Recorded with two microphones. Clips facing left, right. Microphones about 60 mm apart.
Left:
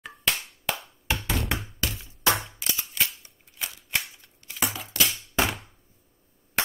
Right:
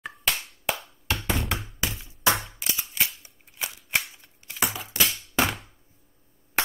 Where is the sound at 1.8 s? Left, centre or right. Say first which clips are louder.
Right 1 dB; centre.